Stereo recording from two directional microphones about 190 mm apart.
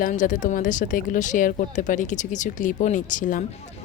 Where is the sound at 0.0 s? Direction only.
40° left (ahead or behind).